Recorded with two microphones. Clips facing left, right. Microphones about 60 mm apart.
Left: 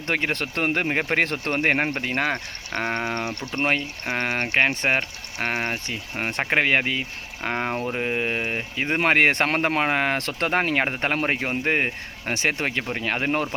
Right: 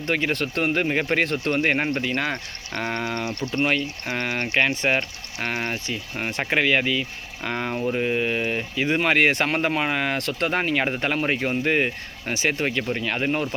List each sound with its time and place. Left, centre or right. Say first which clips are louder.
0.1 s speech: right 1 dB; left